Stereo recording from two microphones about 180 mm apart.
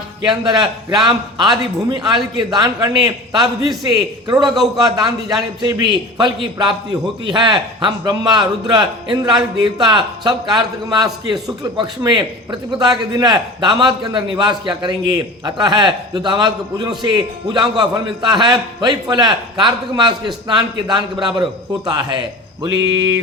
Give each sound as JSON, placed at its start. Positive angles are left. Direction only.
{"t": 0.3, "sound": "a man's voice", "side_deg": -25}
{"t": 3.4, "sound": "a man's voice", "side_deg": 0}
{"t": 4.3, "sound": "a man's voice", "side_deg": -20}
{"t": 22.6, "sound": "a sound", "side_deg": -20}